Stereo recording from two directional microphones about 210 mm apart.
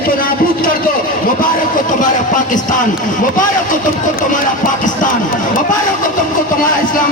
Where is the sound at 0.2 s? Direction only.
45° left (ahead or behind).